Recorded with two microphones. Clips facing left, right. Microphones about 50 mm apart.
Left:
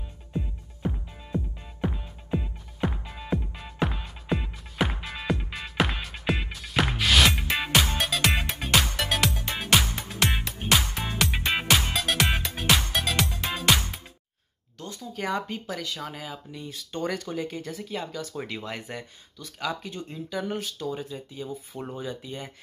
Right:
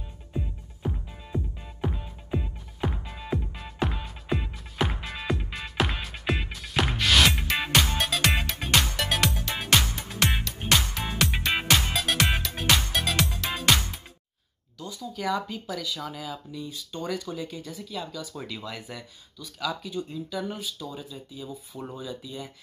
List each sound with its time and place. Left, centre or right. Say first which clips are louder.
1.2 s music: left 2 dB; centre
15.0 s speech: right 1 dB; left
16.5 s speech: left 1 dB; left